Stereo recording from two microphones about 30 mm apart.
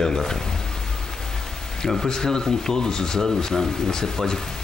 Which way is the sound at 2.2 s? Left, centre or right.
Centre.